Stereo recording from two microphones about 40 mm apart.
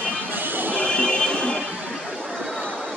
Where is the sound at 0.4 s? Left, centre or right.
Right.